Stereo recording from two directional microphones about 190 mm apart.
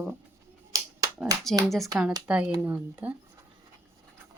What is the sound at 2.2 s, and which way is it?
Speech, 5° right (ahead or behind).